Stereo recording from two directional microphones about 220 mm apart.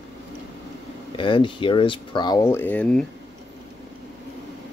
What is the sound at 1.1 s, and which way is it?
Speech, 20° left (ahead or behind).